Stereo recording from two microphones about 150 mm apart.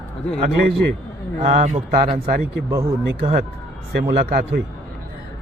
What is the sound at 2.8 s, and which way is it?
Speech, 45° right (ahead or behind).